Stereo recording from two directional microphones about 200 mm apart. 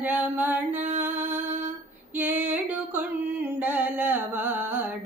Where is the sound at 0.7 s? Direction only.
35° right (ahead or behind).